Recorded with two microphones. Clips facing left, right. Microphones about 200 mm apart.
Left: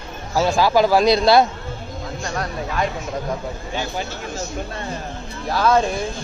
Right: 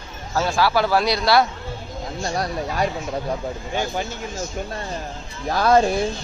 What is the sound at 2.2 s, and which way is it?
Speech, 35° right (ahead or behind).